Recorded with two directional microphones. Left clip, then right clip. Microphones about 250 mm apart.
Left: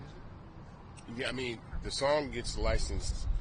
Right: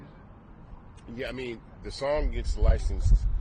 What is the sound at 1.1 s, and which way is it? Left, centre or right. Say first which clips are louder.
A man's voice: right 1 dB; centre.